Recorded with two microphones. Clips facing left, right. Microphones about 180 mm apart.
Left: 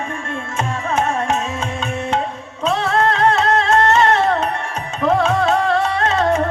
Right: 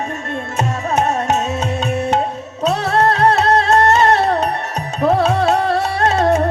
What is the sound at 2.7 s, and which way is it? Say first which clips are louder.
Music: right 2 dB; 35° right (ahead or behind).